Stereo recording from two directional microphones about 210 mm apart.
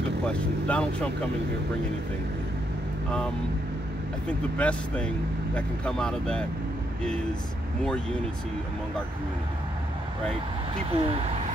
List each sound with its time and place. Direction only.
0.2 s speech: 5° left (ahead or behind)
4.3 s speech: 5° left (ahead or behind)
10.9 s speech: 30° right (ahead or behind)